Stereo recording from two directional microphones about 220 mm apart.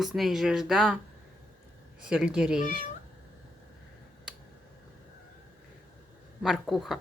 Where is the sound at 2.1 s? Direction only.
5° right (ahead or behind).